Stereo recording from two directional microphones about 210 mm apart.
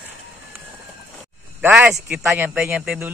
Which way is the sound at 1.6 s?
10° right (ahead or behind).